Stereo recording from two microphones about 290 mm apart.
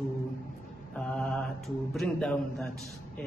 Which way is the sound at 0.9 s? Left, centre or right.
Centre.